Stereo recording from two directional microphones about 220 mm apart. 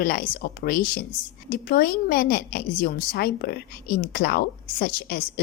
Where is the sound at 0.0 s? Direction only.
40° left (ahead or behind).